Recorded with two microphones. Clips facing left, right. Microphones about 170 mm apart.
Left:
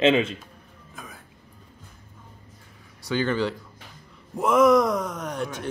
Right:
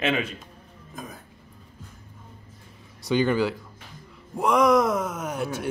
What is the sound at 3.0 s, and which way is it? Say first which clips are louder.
Speech: right 2 dB; 15° right (ahead or behind).